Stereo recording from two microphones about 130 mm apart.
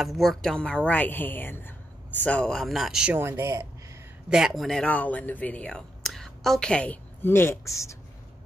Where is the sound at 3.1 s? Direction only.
20° right (ahead or behind).